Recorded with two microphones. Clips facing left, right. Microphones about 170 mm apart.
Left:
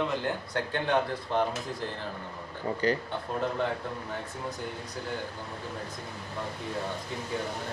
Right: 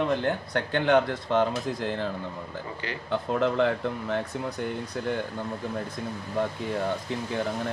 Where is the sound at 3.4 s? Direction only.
90° right.